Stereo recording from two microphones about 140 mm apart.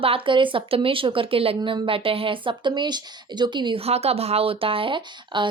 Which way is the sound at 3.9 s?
45° right (ahead or behind).